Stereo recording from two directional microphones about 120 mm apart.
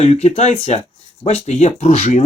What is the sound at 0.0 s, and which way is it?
Speech, 60° left (ahead or behind).